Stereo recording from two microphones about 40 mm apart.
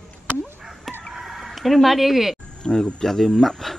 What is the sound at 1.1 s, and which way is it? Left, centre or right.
Chicken, centre.